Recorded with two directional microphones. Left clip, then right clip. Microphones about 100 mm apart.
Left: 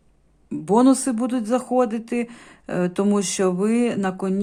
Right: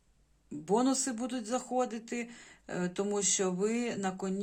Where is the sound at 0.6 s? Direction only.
35° left (ahead or behind).